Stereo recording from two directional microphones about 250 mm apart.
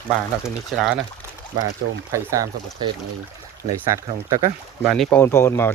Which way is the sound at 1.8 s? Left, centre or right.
Right.